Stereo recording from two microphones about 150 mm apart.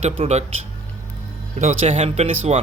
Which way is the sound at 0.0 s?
45° right (ahead or behind).